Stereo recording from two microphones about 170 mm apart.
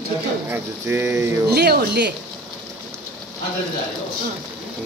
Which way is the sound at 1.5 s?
70° right (ahead or behind).